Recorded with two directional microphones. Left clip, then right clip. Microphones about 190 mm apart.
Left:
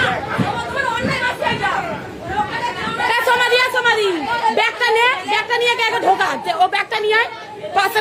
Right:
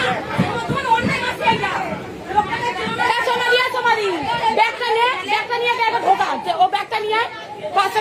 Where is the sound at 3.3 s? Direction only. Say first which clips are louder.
Left 2 dB; 20° left (ahead or behind).